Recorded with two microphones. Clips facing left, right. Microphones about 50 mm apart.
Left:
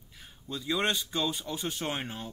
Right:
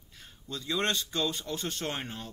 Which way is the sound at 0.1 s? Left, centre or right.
Centre.